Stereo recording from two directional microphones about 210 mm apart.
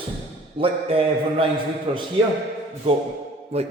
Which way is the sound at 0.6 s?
25° right (ahead or behind).